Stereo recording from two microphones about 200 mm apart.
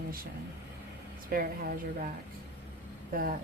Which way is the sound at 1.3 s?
45° right (ahead or behind).